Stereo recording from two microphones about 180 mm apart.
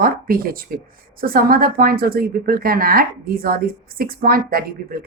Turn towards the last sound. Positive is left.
turn(degrees=-55)  # may be behind; listen again after turning